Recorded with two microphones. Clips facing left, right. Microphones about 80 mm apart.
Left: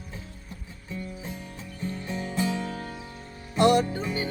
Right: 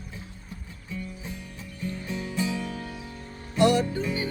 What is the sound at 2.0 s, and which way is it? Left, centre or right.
Music, left.